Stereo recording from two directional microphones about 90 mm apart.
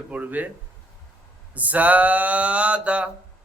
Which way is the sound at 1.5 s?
15° right (ahead or behind).